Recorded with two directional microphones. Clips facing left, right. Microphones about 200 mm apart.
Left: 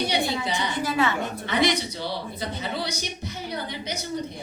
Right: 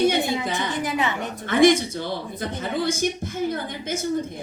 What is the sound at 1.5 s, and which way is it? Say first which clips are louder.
Speech: right 8 dB; 50° right (ahead or behind).